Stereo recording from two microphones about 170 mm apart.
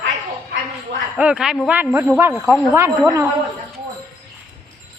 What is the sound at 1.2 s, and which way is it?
Speech, 5° right (ahead or behind).